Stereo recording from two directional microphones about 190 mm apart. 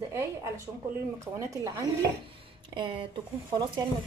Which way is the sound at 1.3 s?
15° right (ahead or behind).